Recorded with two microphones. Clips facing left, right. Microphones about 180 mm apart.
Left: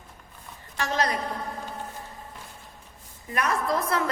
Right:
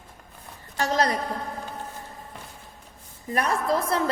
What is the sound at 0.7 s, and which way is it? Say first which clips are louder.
Speech: right 3 dB; 40° right (ahead or behind).